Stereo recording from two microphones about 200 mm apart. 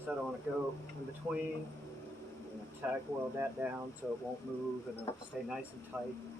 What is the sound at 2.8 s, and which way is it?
Speech, 5° right (ahead or behind).